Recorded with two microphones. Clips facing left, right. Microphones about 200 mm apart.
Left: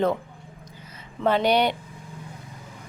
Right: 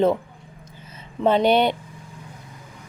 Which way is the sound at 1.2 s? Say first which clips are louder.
Right 3 dB; 20° right (ahead or behind).